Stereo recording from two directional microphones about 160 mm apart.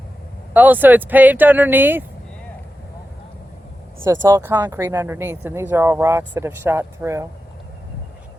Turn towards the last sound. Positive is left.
turn(degrees=-15)  # may be behind; listen again after turning